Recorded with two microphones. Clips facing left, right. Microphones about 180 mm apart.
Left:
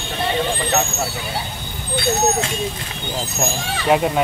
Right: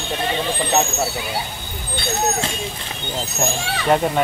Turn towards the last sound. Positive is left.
turn(degrees=5)  # may be behind; listen again after turning